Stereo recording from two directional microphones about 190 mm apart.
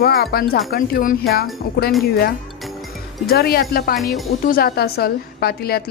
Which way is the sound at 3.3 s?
55° left (ahead or behind).